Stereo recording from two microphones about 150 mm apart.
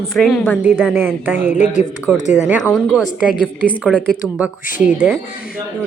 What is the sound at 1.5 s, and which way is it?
Speech, 55° left (ahead or behind).